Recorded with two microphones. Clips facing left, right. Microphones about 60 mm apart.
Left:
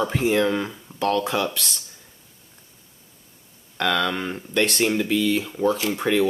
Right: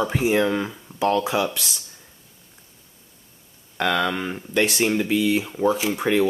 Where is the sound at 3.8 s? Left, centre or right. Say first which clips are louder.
Right 1 dB; centre.